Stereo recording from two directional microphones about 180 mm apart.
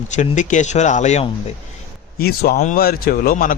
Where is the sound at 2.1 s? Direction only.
60° left (ahead or behind).